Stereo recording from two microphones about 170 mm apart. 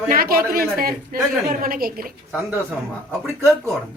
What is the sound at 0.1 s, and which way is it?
A woman's voice, 60° right (ahead or behind).